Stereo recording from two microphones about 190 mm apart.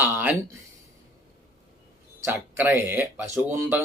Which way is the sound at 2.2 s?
10° right (ahead or behind).